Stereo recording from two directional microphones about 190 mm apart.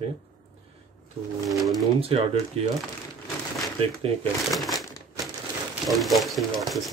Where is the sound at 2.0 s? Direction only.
30° right (ahead or behind).